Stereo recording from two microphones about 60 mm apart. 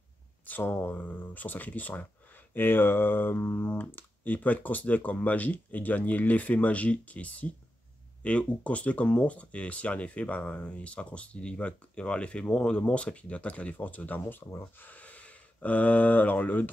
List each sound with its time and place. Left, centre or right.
0.5 s speech: left
14.3 s speech: left